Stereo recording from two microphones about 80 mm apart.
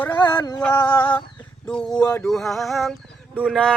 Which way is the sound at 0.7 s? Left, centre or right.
Left.